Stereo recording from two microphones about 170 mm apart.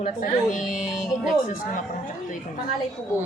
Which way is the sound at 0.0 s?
50° left (ahead or behind).